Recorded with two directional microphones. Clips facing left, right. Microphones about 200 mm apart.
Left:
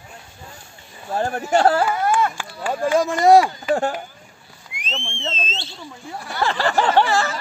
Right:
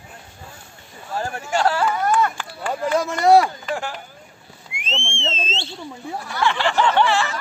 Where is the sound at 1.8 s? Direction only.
10° left (ahead or behind).